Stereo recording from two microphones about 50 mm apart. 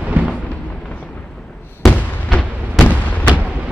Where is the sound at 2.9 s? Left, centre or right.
Left.